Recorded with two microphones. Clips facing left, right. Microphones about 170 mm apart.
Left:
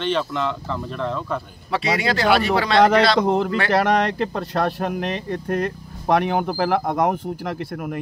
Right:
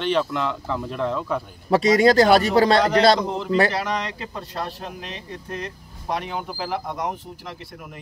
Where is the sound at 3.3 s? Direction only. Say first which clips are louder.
Left 2 dB; 60° left (ahead or behind).